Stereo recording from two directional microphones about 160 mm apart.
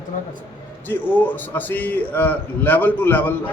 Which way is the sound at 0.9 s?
10° left (ahead or behind).